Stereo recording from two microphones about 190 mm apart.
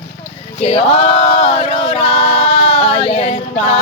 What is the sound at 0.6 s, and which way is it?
A capella, 35° left (ahead or behind).